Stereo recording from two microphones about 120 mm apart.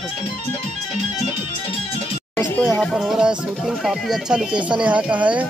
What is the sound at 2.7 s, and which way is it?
Speech, 5° left (ahead or behind).